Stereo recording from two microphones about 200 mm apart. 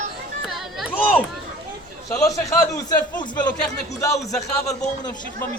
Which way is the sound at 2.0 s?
15° left (ahead or behind).